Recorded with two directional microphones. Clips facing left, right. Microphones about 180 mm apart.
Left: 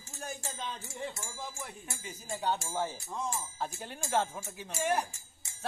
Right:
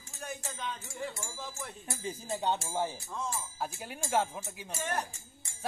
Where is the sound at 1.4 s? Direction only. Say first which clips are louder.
Left 1 dB; 10° left (ahead or behind).